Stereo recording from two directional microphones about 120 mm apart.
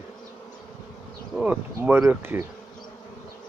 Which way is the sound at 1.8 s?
20° right (ahead or behind).